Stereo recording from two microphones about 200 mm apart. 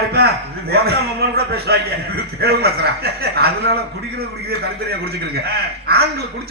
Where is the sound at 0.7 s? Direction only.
50° right (ahead or behind).